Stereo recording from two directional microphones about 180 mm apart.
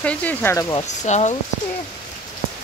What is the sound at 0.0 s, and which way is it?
Speech, 5° left (ahead or behind).